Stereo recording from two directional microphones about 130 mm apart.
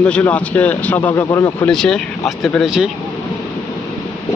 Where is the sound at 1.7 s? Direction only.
5° left (ahead or behind).